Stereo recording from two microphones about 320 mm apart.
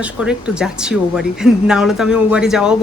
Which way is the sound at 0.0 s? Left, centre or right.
Centre.